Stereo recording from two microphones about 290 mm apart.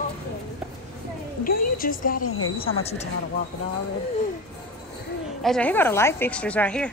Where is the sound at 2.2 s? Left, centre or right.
Left.